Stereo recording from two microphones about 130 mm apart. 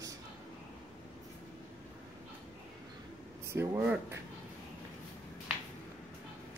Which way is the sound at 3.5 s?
20° right (ahead or behind).